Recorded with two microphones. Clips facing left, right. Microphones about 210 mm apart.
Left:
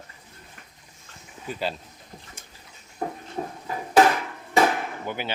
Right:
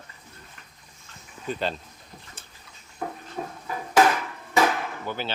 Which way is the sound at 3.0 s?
35° left (ahead or behind).